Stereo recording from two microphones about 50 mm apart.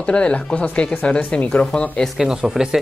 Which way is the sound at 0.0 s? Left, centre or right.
Left.